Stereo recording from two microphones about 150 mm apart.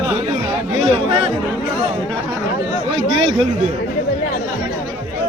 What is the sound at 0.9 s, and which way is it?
Chatter, 35° right (ahead or behind).